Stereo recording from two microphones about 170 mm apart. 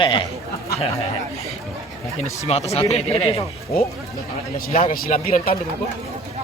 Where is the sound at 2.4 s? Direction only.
40° left (ahead or behind).